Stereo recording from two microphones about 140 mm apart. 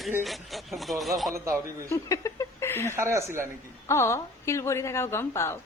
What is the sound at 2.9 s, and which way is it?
Speech, 20° right (ahead or behind).